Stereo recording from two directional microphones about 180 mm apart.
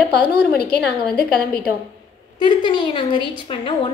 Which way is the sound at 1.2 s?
60° left (ahead or behind).